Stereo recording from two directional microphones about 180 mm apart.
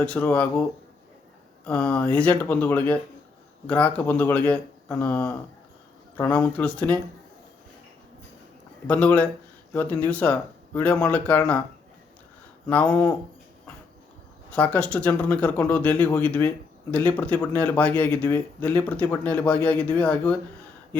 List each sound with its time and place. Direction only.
0.0 s speech: 5° left (ahead or behind)
1.6 s speech: 5° left (ahead or behind)
8.9 s speech: 5° left (ahead or behind)
12.6 s speech: 5° left (ahead or behind)
14.5 s speech: 10° left (ahead or behind)